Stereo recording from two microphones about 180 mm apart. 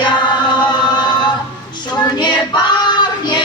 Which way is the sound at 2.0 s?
25° left (ahead or behind).